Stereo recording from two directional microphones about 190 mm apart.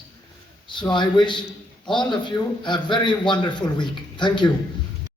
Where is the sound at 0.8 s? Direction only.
25° left (ahead or behind).